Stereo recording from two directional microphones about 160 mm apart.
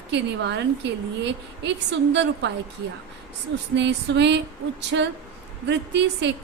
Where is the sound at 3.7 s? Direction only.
90° right.